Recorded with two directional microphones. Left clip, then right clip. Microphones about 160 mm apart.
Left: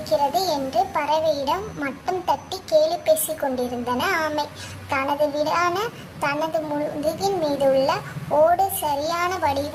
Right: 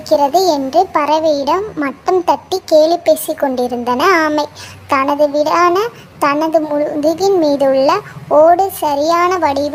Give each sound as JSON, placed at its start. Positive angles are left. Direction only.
{"t": 0.1, "sound": "a child's voice", "side_deg": -40}